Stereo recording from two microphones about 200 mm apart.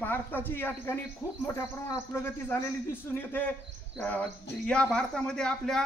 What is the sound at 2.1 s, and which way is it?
Speech, 10° left (ahead or behind).